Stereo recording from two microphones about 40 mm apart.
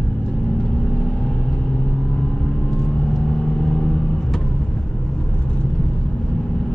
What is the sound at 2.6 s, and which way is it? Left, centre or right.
Vehicle, centre.